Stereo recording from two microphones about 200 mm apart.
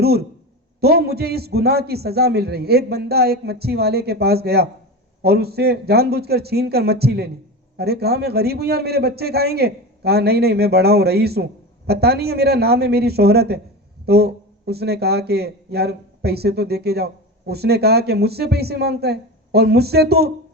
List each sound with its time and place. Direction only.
0.0 s a man's voice: 50° right (ahead or behind)